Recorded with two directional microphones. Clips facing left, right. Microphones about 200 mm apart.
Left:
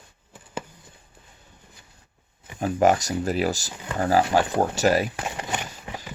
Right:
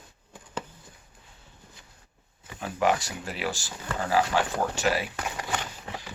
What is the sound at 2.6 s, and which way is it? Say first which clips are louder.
Speech: left 6 dB; 45° left (ahead or behind).